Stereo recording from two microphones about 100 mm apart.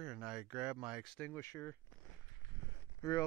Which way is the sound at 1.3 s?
25° left (ahead or behind).